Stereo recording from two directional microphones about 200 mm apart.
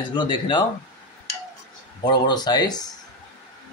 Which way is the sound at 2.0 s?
20° left (ahead or behind).